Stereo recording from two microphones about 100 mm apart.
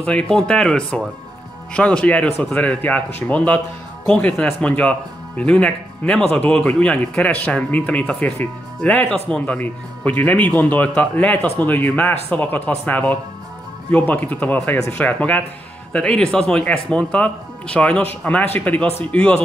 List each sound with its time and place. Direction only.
0.0 s speech: 10° left (ahead or behind)